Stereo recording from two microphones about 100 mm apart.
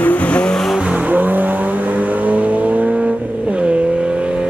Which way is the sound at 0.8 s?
15° right (ahead or behind).